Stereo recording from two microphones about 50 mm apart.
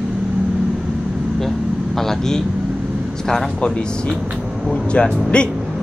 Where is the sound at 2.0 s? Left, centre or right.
Centre.